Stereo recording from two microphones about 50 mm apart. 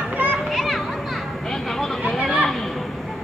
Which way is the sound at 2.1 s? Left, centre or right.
Centre.